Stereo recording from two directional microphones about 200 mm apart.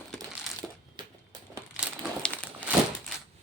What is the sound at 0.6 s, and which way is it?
Crushing, 5° right (ahead or behind).